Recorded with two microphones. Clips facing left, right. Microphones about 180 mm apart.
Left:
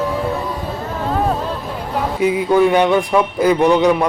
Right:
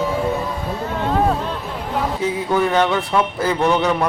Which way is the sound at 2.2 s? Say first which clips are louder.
Left 7 dB; 15° left (ahead or behind).